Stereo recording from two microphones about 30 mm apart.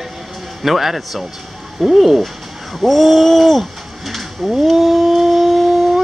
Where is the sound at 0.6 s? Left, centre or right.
Centre.